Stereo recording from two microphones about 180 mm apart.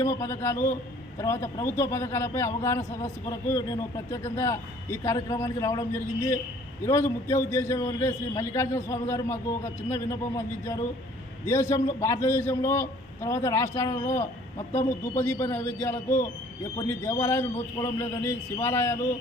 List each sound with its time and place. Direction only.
0.0 s a man's voice: 15° left (ahead or behind)